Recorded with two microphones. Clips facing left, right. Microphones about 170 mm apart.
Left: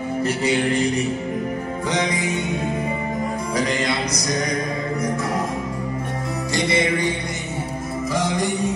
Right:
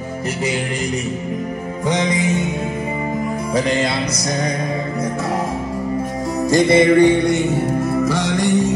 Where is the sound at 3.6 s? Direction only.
30° right (ahead or behind).